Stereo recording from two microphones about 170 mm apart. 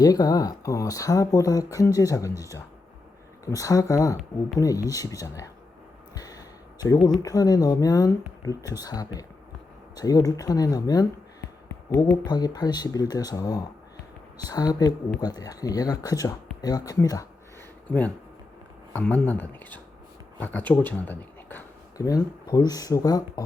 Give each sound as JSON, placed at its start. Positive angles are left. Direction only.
{"t": 0.0, "sound": "speech", "side_deg": 20}
{"t": 3.4, "sound": "speech", "side_deg": 20}
{"t": 6.1, "sound": "a sound", "side_deg": 20}
{"t": 6.8, "sound": "speech", "side_deg": 20}
{"t": 12.2, "sound": "speech", "side_deg": 25}
{"t": 17.8, "sound": "speech", "side_deg": 10}